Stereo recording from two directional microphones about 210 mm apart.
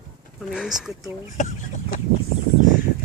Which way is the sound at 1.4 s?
35° left (ahead or behind).